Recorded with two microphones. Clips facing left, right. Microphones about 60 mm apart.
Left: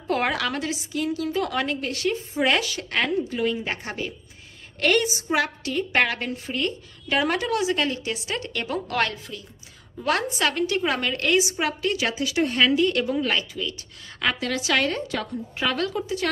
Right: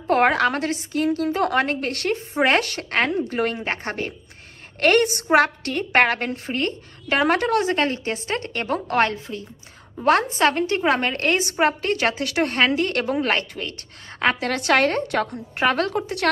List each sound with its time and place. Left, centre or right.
0.0 s a woman's voice: right
3.3 s a woman's voice: right